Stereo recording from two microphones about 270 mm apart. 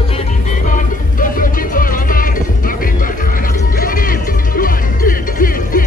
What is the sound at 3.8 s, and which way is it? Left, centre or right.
Music, left.